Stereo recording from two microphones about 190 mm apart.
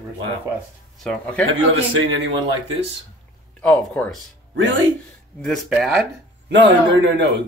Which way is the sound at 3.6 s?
10° left (ahead or behind).